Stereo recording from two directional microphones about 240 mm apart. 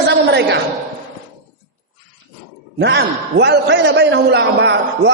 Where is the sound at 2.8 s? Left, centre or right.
Right.